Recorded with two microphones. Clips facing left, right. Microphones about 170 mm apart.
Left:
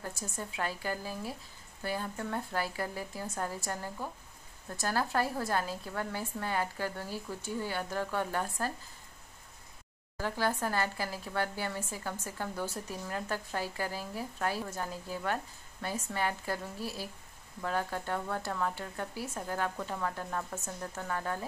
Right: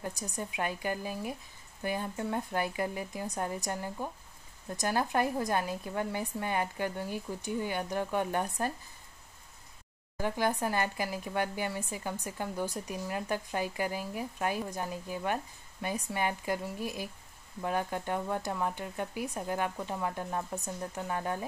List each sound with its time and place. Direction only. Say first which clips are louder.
0.0 s speech: right 2 dB; 15° right (ahead or behind)
10.1 s speech: right 2 dB; 20° right (ahead or behind)